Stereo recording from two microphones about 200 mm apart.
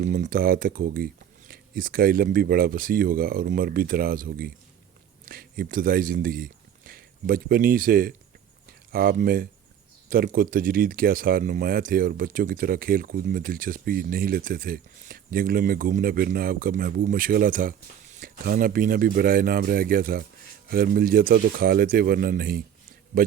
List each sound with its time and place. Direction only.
0.0 s speech: 40° right (ahead or behind)